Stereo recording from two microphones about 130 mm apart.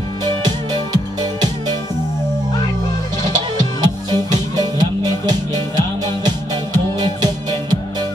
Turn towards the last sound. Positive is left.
turn(degrees=-30)  # may be behind; listen again after turning